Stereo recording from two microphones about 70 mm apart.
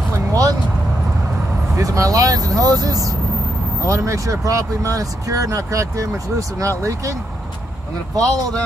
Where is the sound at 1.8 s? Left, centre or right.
Right.